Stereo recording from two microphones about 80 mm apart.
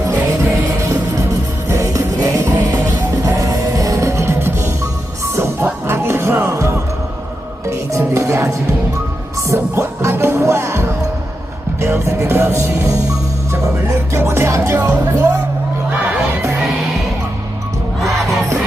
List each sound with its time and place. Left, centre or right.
1.7 s music: right